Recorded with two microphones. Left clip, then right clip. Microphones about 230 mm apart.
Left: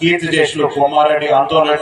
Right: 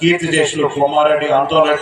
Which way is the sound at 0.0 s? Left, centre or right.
Left.